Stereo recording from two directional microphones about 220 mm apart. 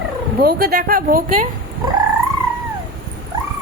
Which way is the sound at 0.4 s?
45° right (ahead or behind).